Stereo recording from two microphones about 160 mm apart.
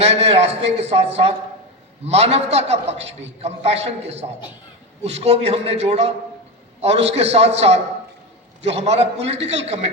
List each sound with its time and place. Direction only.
0.0 s a man's voice: 40° right (ahead or behind)